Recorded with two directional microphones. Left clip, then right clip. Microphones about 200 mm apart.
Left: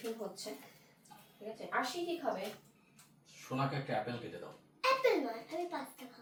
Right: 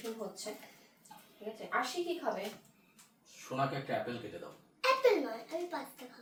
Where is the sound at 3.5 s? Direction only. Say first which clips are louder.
Right 3 dB; 35° right (ahead or behind).